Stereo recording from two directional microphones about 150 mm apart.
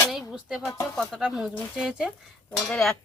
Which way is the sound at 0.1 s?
Centre (ahead or behind).